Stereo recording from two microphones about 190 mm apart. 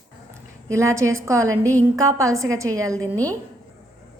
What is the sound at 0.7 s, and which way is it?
A woman's voice, 15° right (ahead or behind).